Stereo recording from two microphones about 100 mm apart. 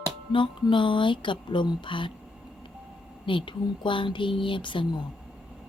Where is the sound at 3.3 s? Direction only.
55° left (ahead or behind).